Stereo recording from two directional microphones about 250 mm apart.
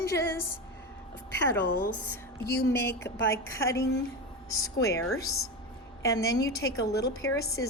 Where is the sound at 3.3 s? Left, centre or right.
Centre.